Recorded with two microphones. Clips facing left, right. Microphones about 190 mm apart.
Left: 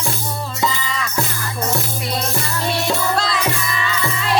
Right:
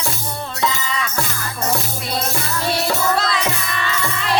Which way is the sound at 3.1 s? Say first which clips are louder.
Even; centre (ahead or behind).